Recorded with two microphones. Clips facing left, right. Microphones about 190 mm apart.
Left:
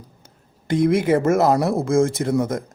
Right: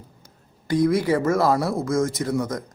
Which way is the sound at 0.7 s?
25° left (ahead or behind).